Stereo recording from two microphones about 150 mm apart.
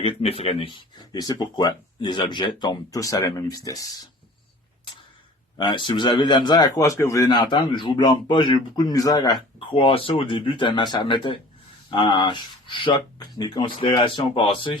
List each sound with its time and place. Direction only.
0.0 s speech: 40° left (ahead or behind); by 4.1 s 25° left (ahead or behind)
5.5 s a man's voice: 30° left (ahead or behind)